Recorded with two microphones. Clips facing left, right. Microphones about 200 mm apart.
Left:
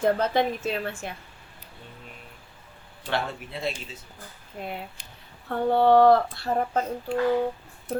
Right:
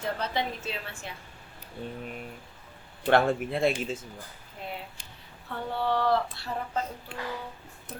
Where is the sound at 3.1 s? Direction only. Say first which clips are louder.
Right 7 dB; 50° right (ahead or behind).